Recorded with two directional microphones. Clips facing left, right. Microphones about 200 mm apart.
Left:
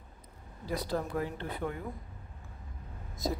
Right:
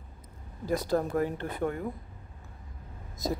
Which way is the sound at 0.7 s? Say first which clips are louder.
Right 6 dB; 45° right (ahead or behind).